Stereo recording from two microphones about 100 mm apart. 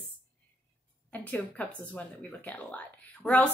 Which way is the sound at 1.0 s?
15° left (ahead or behind).